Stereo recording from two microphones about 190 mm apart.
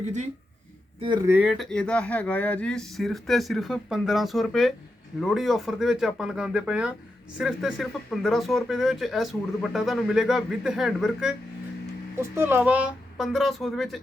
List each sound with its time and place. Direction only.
0.0 s speech: 35° right (ahead or behind)
0.9 s speech: 25° right (ahead or behind)
1.3 s speech: 5° right (ahead or behind)